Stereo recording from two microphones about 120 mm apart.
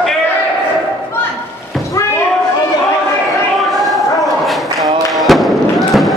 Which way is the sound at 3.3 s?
Centre (ahead or behind).